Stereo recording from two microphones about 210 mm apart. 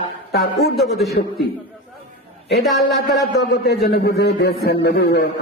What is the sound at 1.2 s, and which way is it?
Speech, 50° left (ahead or behind).